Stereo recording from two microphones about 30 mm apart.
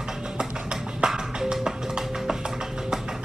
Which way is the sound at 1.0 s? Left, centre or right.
Right.